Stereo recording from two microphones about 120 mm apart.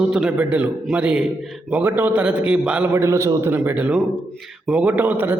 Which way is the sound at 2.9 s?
25° right (ahead or behind).